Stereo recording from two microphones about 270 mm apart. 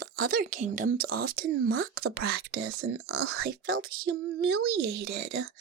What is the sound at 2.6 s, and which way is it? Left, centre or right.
Speech, right.